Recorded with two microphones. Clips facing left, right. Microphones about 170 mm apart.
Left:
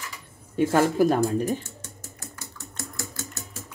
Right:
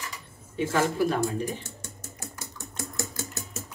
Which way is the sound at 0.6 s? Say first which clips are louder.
Left 5 dB; 45° left (ahead or behind).